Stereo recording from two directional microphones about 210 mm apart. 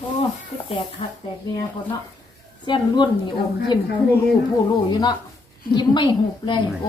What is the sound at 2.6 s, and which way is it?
Speech, 20° left (ahead or behind).